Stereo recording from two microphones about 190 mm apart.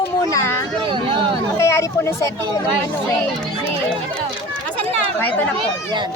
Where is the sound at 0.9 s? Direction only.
25° right (ahead or behind).